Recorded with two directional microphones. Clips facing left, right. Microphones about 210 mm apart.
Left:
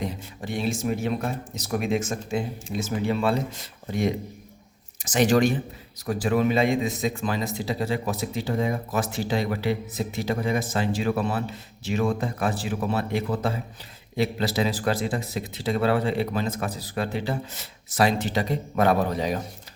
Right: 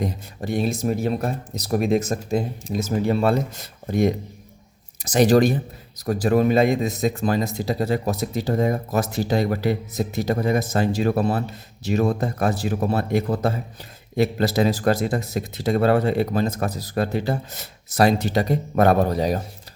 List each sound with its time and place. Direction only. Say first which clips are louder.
0.0 s a man's voice: right 4 dB; 40° right (ahead or behind)